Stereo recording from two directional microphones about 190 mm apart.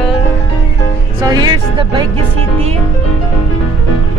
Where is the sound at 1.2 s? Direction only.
20° right (ahead or behind).